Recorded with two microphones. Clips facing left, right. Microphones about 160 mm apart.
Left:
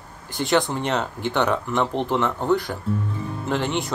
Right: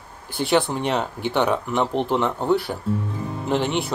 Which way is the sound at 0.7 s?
15° right (ahead or behind).